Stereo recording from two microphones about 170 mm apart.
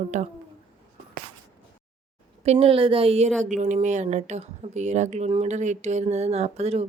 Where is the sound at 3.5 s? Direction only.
45° right (ahead or behind).